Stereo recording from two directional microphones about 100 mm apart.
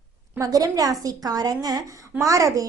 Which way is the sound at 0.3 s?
35° right (ahead or behind).